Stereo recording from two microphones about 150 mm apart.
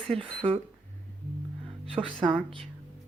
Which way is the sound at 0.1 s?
40° right (ahead or behind).